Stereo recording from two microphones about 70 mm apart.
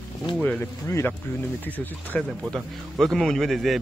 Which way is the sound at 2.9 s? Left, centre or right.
Centre.